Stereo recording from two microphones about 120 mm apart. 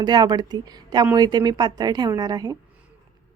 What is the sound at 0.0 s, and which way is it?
Speech, 35° right (ahead or behind).